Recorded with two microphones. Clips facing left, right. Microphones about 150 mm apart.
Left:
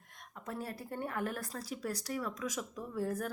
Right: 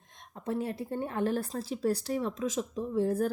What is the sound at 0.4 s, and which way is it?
Speech, 25° right (ahead or behind).